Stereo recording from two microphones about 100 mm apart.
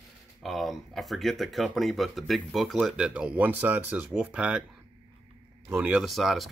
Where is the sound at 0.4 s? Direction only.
Centre (ahead or behind).